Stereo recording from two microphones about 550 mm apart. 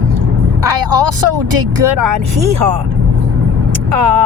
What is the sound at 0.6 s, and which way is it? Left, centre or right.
Speech, right.